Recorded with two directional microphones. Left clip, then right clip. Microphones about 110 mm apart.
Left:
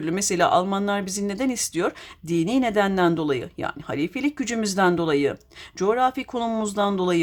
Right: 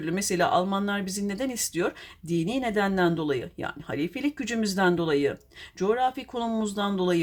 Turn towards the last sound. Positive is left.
turn(degrees=35)  # may be behind; listen again after turning